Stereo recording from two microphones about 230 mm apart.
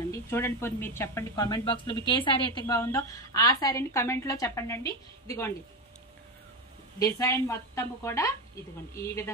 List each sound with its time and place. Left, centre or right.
0.1 s a woman's voice: centre
7.0 s a woman's voice: centre